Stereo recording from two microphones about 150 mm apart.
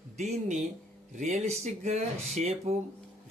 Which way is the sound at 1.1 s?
50° right (ahead or behind).